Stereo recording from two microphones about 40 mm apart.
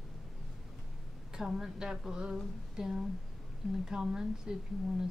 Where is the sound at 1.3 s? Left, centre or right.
Centre.